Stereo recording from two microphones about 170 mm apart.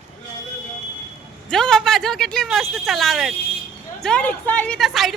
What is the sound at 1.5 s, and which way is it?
A woman's voice, centre (ahead or behind).